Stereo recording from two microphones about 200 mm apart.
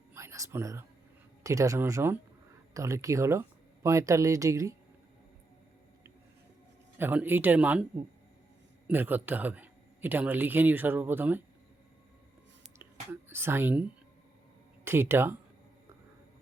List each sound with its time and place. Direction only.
0.1 s whispering: 15° right (ahead or behind)
1.5 s speech: 15° right (ahead or behind)
7.0 s speech: 10° right (ahead or behind)
8.9 s speech: 10° right (ahead or behind)
12.8 s whispering: 10° right (ahead or behind)
14.8 s speech: 10° right (ahead or behind)